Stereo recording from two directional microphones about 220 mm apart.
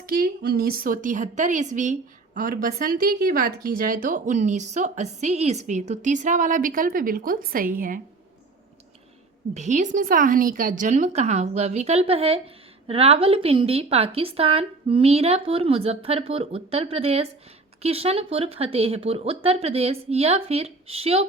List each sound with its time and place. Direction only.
0.0 s a woman's voice: 40° right (ahead or behind)
9.6 s a woman's voice: 35° right (ahead or behind)